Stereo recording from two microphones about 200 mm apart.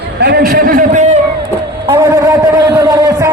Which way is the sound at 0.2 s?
55° right (ahead or behind).